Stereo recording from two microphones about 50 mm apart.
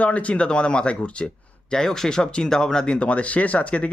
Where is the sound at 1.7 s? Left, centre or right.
Centre.